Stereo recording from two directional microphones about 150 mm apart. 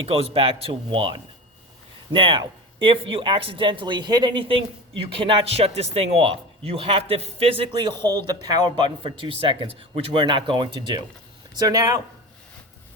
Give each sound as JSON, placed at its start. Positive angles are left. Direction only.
{"t": 0.1, "sound": "a man's voice", "side_deg": -40}